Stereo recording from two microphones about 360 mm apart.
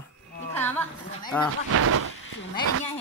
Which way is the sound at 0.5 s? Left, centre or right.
Centre.